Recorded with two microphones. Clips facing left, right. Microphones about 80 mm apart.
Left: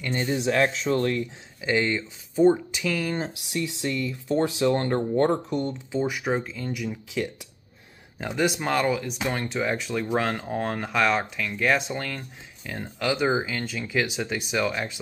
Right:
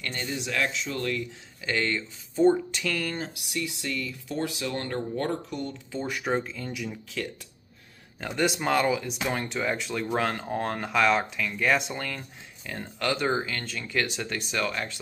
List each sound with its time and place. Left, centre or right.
0.1 s speech: left
1.6 s speech: centre
3.2 s speech: left
6.0 s speech: centre
8.2 s speech: centre